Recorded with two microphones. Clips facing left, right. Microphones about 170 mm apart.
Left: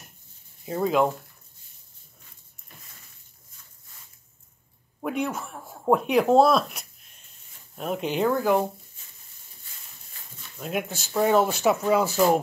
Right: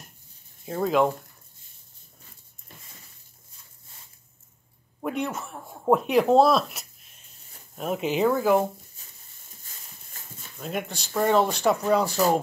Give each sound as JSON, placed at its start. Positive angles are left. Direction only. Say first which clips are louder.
{"t": 0.7, "sound": "speech", "louder": "even", "side_deg": 0}
{"t": 5.0, "sound": "speech", "louder": "left 1 dB", "side_deg": 0}
{"t": 10.1, "sound": "a sound", "louder": "right 3 dB", "side_deg": -45}
{"t": 10.6, "sound": "speech", "louder": "left 2 dB", "side_deg": 5}